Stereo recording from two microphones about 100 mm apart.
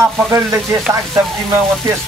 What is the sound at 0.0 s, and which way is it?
Music, 30° right (ahead or behind).